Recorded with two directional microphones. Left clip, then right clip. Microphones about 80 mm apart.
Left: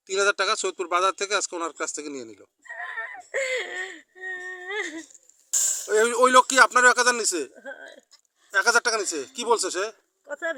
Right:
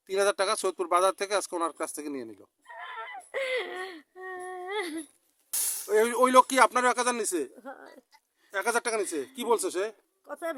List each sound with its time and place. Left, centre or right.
0.1 s speech: right
2.6 s whimper: right
5.5 s a sound: right
5.9 s speech: centre
7.6 s speech: right
8.4 s speech: centre